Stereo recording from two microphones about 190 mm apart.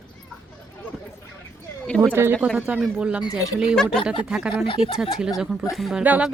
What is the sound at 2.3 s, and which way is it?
Speech, centre (ahead or behind).